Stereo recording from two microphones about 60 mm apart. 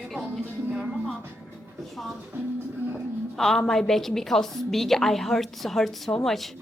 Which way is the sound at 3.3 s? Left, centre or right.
Centre.